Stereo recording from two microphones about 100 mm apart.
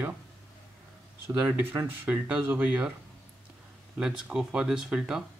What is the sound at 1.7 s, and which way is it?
Speech, 20° right (ahead or behind).